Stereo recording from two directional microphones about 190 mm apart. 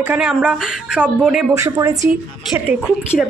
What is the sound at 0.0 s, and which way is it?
A woman's voice, 5° right (ahead or behind).